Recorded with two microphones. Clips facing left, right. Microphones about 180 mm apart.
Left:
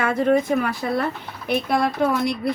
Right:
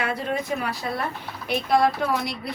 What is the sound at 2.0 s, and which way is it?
Speech, 55° left (ahead or behind).